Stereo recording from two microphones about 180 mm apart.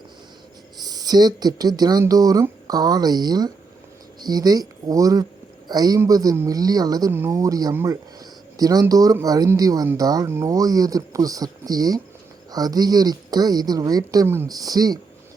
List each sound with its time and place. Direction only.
0.8 s speech: 20° right (ahead or behind)